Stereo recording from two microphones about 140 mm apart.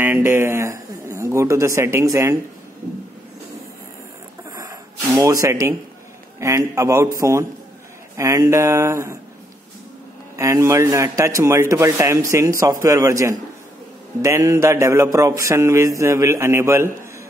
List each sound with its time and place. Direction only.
0.0 s a man's voice: 15° right (ahead or behind)
4.5 s a sound: 25° right (ahead or behind)
6.4 s speech: 20° right (ahead or behind)
10.3 s speech: 20° right (ahead or behind)